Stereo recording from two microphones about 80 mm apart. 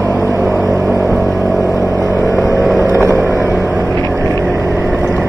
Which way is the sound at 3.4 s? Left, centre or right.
Centre.